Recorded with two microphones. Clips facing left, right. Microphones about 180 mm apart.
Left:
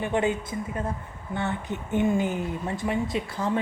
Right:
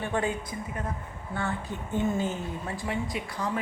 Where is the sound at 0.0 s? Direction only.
20° left (ahead or behind).